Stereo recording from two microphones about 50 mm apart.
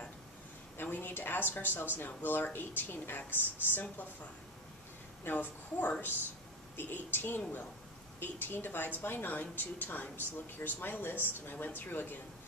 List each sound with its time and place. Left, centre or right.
0.7 s speech: left
5.3 s speech: left